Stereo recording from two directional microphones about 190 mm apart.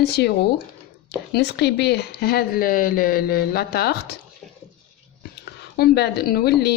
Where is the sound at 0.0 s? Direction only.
60° left (ahead or behind).